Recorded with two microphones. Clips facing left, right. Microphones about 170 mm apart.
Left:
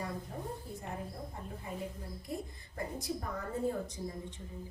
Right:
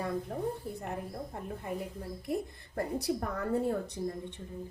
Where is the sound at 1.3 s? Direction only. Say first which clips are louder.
Right 5 dB; 60° right (ahead or behind).